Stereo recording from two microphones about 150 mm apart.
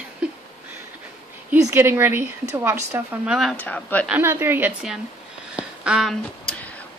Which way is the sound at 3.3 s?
Centre (ahead or behind).